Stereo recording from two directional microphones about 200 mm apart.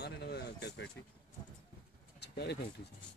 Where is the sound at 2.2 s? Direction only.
55° left (ahead or behind).